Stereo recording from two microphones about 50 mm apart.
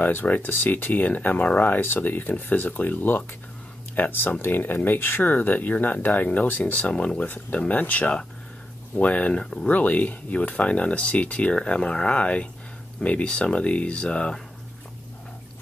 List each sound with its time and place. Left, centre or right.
0.0 s speech: left
9.4 s speech: centre
9.7 s speech: left